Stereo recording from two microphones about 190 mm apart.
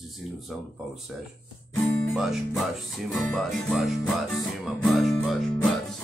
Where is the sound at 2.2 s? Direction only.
Centre (ahead or behind).